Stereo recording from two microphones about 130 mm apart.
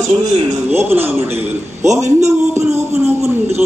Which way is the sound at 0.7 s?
15° right (ahead or behind).